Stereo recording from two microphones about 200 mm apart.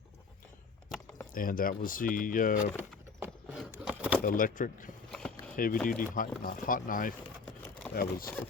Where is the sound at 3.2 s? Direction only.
5° right (ahead or behind).